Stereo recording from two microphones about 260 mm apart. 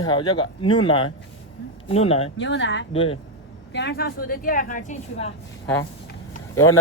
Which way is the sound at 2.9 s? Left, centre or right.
Left.